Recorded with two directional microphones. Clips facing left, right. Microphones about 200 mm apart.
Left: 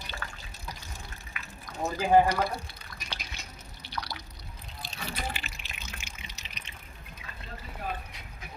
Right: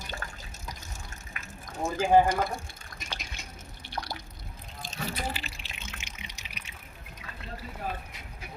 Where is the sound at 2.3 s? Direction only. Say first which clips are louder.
Even; 45° right (ahead or behind).